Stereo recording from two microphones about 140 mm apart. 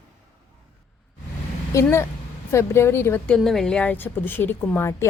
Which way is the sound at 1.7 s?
20° left (ahead or behind).